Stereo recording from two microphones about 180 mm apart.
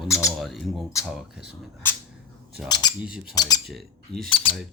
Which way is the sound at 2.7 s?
25° left (ahead or behind).